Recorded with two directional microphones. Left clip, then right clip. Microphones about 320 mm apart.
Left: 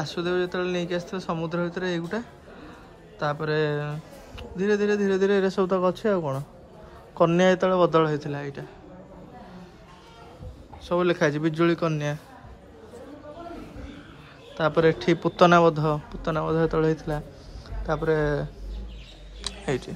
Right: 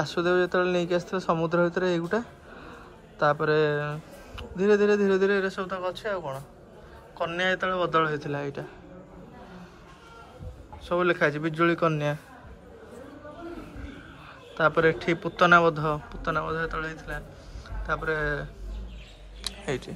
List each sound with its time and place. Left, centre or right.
0.0 s a man's voice: centre
10.9 s a man's voice: centre
14.5 s a man's voice: centre
19.4 s a sound: centre